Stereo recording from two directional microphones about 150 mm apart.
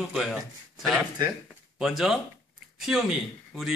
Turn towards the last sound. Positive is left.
turn(degrees=0)  # may be behind; listen again after turning